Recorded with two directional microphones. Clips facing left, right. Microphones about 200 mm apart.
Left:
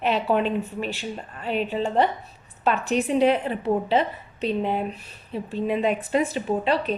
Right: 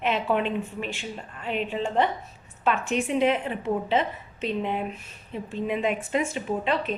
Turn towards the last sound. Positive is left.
turn(degrees=35)  # may be behind; listen again after turning